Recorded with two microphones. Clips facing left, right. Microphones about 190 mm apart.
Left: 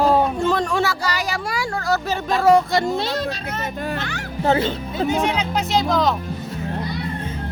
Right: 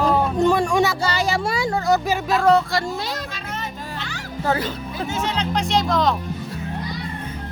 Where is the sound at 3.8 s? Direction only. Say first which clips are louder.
Left 6 dB; 60° left (ahead or behind).